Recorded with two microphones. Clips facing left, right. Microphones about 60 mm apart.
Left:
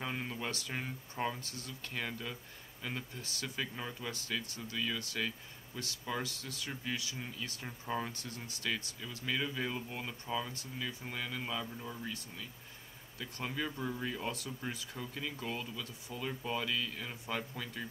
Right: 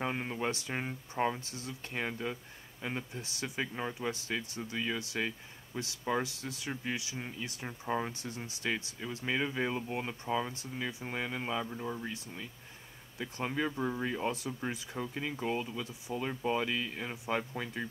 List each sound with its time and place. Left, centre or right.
0.0 s speech: right